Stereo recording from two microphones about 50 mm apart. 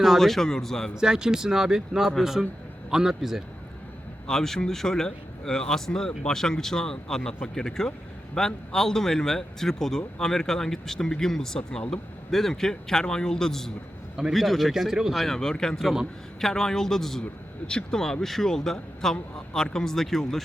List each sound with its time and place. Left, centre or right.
0.0 s speech: centre
0.9 s speech: centre
4.3 s speech: centre
15.2 s speech: centre